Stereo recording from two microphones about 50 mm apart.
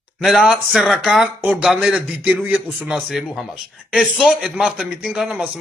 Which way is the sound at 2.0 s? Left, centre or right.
Right.